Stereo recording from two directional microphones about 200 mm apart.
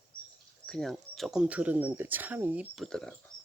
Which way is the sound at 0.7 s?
Centre (ahead or behind).